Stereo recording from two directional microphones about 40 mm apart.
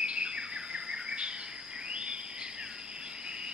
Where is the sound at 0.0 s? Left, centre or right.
Right.